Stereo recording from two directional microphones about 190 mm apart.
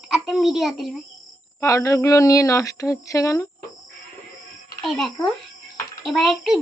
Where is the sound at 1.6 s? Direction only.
15° left (ahead or behind).